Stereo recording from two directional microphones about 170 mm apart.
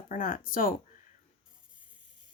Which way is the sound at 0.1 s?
50° left (ahead or behind).